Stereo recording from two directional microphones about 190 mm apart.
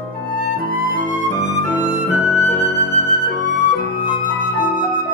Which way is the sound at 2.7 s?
40° right (ahead or behind).